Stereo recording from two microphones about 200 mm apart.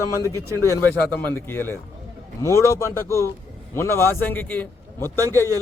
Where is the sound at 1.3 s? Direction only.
10° left (ahead or behind).